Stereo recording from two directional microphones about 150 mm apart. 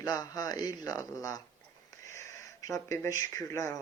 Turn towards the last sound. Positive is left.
turn(degrees=20)  # may be behind; listen again after turning